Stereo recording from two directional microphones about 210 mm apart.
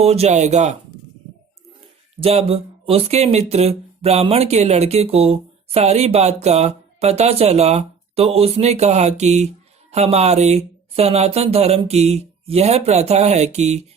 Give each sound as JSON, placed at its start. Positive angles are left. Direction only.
{"t": 0.0, "sound": "speech", "side_deg": -30}
{"t": 2.2, "sound": "speech", "side_deg": -30}